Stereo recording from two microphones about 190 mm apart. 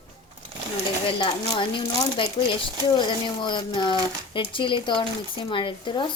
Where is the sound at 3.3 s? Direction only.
25° left (ahead or behind).